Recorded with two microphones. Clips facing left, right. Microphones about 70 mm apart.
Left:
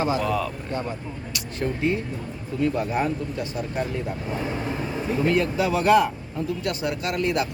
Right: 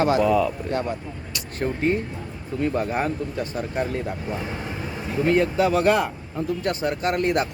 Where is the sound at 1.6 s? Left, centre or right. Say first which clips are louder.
Right 2 dB; right.